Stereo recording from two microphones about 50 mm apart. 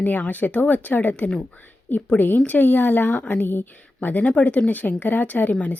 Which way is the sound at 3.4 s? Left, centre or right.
Left.